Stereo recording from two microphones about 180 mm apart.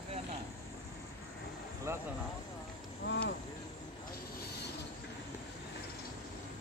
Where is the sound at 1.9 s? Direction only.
15° right (ahead or behind).